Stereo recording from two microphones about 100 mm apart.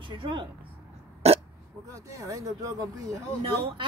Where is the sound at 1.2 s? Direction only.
90° right.